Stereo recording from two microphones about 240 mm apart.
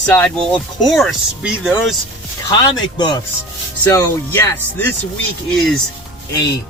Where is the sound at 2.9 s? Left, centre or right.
Centre.